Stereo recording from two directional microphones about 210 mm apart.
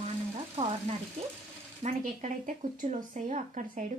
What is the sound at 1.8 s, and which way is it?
Speech, 35° right (ahead or behind).